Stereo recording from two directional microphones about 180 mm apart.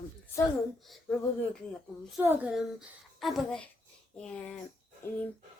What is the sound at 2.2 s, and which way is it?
Speech, 10° right (ahead or behind).